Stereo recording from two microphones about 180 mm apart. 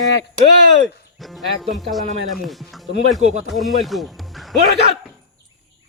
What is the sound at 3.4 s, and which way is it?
Speech, centre (ahead or behind).